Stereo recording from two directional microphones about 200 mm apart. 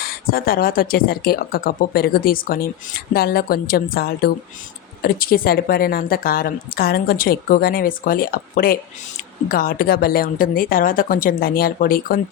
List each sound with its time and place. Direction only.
0.0 s a woman's voice: 50° left (ahead or behind)